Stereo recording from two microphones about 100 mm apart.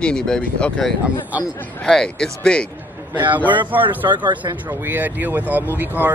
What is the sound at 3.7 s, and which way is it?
Speech, 55° right (ahead or behind).